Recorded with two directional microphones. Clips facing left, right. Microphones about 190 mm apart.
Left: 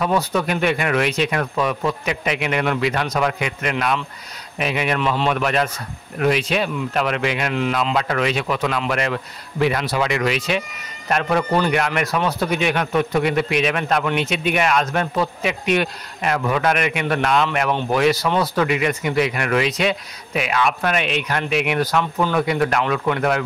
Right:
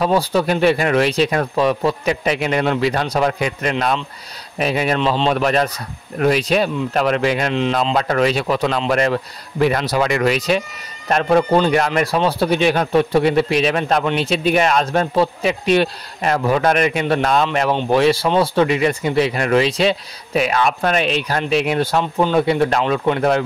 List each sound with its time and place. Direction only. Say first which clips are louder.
0.0 s a man's voice: right 3 dB; 30° right (ahead or behind)
5.4 s a man's voice: right 3 dB; 35° right (ahead or behind)